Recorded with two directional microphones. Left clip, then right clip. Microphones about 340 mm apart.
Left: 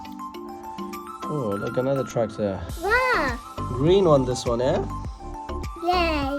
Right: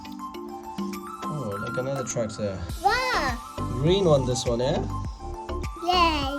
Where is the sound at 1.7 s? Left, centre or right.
Centre.